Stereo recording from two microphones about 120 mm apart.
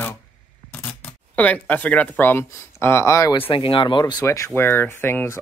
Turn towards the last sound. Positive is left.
turn(degrees=20)  # may be behind; listen again after turning